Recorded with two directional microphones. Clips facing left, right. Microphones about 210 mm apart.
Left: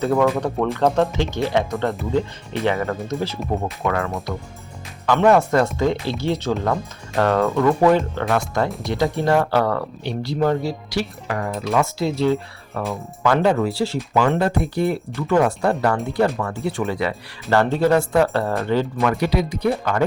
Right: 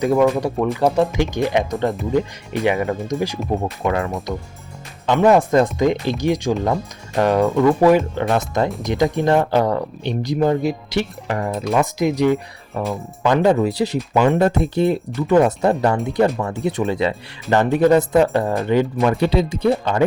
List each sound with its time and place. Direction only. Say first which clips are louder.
0.0 s speech: right 2 dB; 10° right (ahead or behind)